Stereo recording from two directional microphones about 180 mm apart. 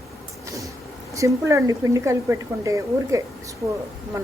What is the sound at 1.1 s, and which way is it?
Speech, 15° right (ahead or behind).